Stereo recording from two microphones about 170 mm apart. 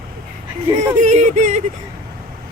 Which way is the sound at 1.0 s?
45° right (ahead or behind).